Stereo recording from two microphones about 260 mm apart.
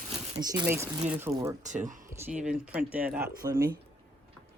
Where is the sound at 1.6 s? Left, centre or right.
Right.